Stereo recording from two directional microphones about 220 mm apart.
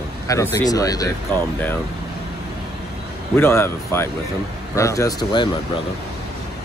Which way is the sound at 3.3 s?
10° left (ahead or behind).